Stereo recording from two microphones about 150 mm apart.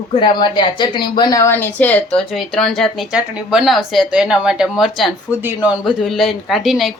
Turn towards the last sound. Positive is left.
turn(degrees=0)  # may be behind; listen again after turning